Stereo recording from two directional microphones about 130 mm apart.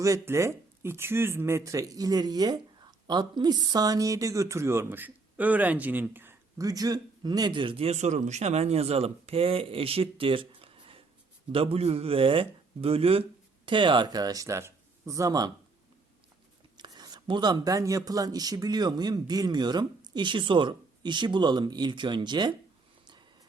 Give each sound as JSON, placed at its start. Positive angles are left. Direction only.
{"t": 0.0, "sound": "speech", "side_deg": -25}
{"t": 16.7, "sound": "speech", "side_deg": -35}